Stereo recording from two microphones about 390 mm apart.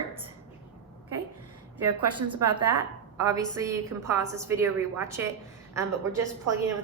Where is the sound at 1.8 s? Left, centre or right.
Right.